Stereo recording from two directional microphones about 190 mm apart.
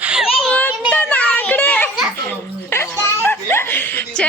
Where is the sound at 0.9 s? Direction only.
5° left (ahead or behind).